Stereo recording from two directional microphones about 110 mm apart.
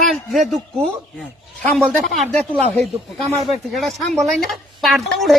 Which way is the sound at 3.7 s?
Centre (ahead or behind).